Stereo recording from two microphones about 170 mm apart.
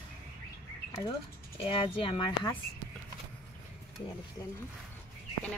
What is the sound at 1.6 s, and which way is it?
Speech, 30° left (ahead or behind).